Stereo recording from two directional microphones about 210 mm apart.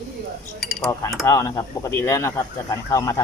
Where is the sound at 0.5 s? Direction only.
Centre (ahead or behind).